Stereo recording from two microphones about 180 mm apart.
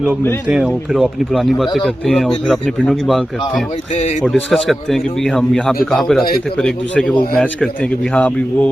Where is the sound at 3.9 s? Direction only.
40° left (ahead or behind).